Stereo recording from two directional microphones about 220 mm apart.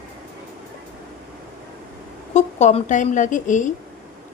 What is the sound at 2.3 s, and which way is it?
A woman's voice, 30° left (ahead or behind).